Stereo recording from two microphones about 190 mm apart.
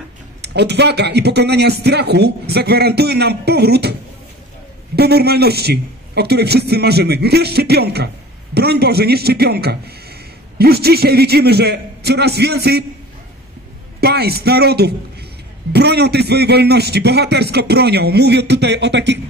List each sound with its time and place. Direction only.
0.4 s a man's voice: 60° right (ahead or behind)
4.9 s a man's voice: 55° right (ahead or behind)
14.0 s a man's voice: 55° right (ahead or behind)